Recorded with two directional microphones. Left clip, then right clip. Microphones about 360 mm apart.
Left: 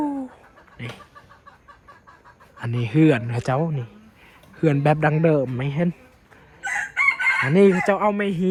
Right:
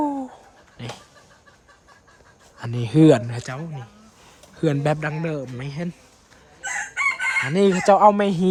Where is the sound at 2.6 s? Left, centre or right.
Centre.